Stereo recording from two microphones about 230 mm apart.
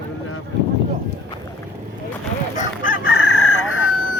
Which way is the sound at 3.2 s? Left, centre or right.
Left.